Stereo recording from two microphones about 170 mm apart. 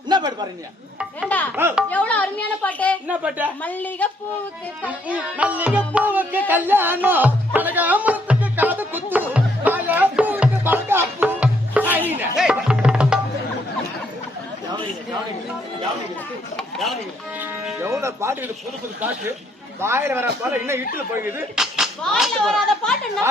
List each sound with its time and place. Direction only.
0.1 s a sound: 25° right (ahead or behind)
1.5 s music: 15° right (ahead or behind)
1.9 s a woman's voice: 10° left (ahead or behind)
3.1 s music: 10° right (ahead or behind)
3.6 s a woman's voice: 10° left (ahead or behind)
4.9 s music: 10° right (ahead or behind)
12.4 s tabla: 5° right (ahead or behind)
16.6 s speech: centre (ahead or behind)
17.4 s music: 5° right (ahead or behind)
19.8 s music: 15° right (ahead or behind)
20.4 s speech: 15° right (ahead or behind); by 23.2 s centre (ahead or behind)